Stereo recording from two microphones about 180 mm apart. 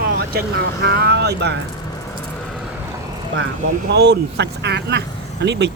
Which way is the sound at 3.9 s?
70° right (ahead or behind).